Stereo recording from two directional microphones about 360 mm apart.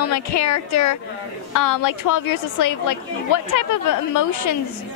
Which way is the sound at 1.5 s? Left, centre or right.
Left.